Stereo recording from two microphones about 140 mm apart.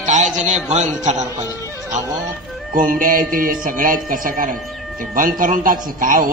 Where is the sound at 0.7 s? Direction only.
55° right (ahead or behind).